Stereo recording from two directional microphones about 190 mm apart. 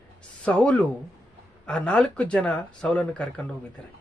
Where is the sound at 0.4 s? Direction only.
5° left (ahead or behind).